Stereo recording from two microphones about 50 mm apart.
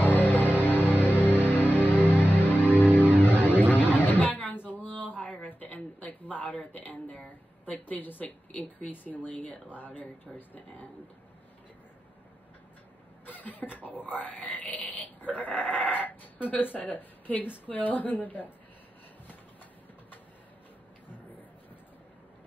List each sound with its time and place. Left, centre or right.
0.0 s music: left
3.7 s a sound: left
7.7 s a woman's voice: left
13.2 s a woman's voice: left